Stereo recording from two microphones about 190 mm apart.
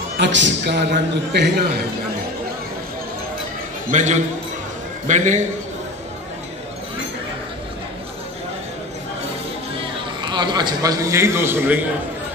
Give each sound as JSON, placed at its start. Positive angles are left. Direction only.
{"t": 0.2, "sound": "a man's voice", "side_deg": -70}
{"t": 1.3, "sound": "a man's voice", "side_deg": -60}
{"t": 3.9, "sound": "a man's voice", "side_deg": -40}
{"t": 10.2, "sound": "a man's voice", "side_deg": -25}